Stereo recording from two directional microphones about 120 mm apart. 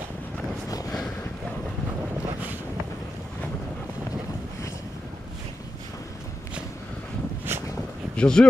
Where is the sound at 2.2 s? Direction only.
15° right (ahead or behind).